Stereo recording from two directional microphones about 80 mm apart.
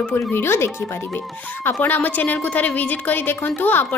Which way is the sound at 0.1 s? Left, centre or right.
Left.